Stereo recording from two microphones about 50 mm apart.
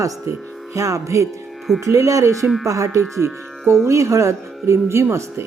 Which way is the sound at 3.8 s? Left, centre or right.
Right.